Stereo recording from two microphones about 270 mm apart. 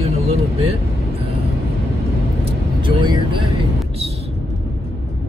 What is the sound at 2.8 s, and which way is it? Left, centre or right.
Speech, centre.